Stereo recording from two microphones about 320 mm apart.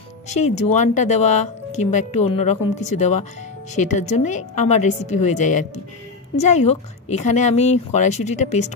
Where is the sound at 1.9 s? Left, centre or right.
Left.